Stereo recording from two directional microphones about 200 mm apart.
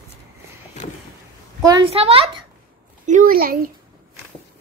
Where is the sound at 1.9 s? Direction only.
30° right (ahead or behind).